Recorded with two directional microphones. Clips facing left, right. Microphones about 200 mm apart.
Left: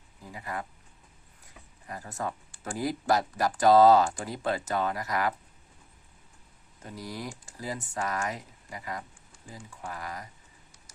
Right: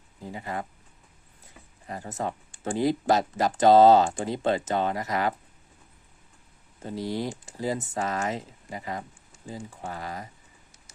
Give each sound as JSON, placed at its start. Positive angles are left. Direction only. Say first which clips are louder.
{"t": 0.2, "sound": "speech", "louder": "right 4 dB", "side_deg": -25}
{"t": 1.9, "sound": "speech", "louder": "right 3 dB", "side_deg": -25}
{"t": 6.8, "sound": "speech", "louder": "right 8 dB", "side_deg": -25}